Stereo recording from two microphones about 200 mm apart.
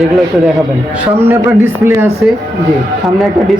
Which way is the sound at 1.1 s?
10° right (ahead or behind).